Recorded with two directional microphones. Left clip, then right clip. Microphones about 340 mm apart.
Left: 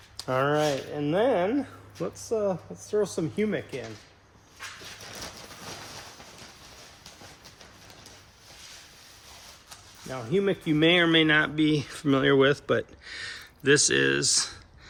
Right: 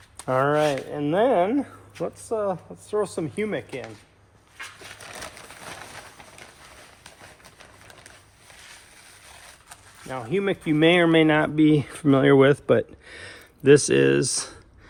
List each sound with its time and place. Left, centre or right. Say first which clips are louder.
0.2 s speech: right 4 dB; centre
10.1 s speech: right 1 dB; centre